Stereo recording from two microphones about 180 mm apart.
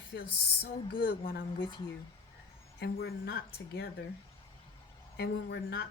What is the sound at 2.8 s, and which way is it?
A woman's voice, 60° left (ahead or behind).